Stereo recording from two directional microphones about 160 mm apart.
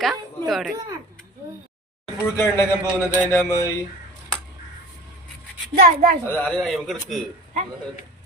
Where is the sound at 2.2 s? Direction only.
15° left (ahead or behind).